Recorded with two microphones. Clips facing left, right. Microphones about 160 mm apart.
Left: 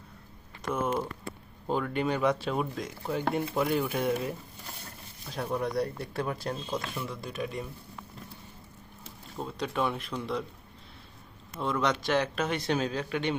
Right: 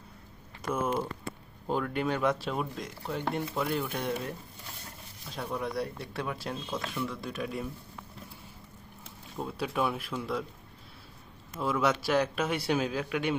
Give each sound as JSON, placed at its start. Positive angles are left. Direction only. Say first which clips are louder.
{"t": 0.6, "sound": "speech", "louder": "even", "side_deg": 0}
{"t": 6.7, "sound": "speech", "louder": "even", "side_deg": 15}
{"t": 7.1, "sound": "speech", "louder": "even", "side_deg": 0}
{"t": 9.4, "sound": "speech", "louder": "even", "side_deg": -5}
{"t": 11.5, "sound": "speech", "louder": "right 1 dB", "side_deg": -5}